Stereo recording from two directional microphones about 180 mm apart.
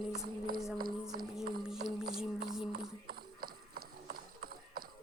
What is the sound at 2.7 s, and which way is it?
Clip-clop, 55° right (ahead or behind).